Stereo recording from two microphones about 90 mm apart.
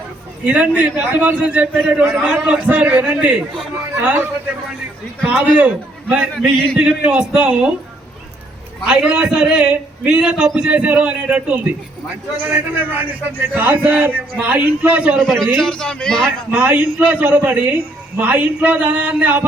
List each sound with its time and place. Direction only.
0.4 s a man's voice: 15° right (ahead or behind)
5.3 s a man's voice: 15° right (ahead or behind)
8.9 s a man's voice: 10° right (ahead or behind)
15.2 s a man's voice: 5° left (ahead or behind)
16.5 s a man's voice: 20° right (ahead or behind)